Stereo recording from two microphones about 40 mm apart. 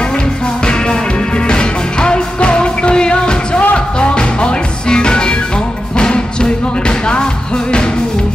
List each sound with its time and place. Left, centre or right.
1.5 s music: left